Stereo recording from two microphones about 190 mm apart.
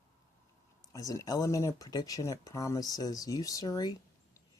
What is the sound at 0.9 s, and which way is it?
Speech, 15° left (ahead or behind).